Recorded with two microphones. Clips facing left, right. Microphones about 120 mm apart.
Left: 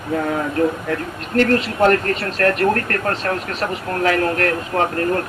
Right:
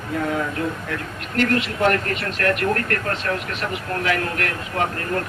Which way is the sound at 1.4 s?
40° left (ahead or behind).